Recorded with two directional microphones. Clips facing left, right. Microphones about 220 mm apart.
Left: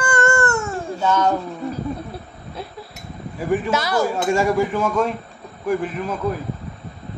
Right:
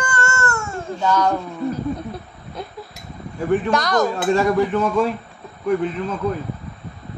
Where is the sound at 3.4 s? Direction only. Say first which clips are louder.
Right 2 dB; 5° left (ahead or behind).